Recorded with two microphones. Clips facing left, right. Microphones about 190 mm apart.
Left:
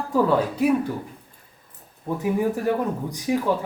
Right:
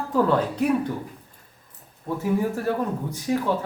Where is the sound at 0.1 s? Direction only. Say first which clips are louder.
Left 1 dB; 10° left (ahead or behind).